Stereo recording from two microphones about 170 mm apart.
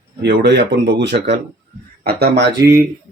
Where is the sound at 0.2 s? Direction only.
85° right.